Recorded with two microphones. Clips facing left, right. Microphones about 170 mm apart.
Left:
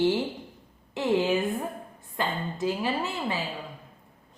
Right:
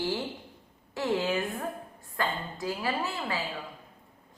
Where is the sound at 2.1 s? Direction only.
20° left (ahead or behind).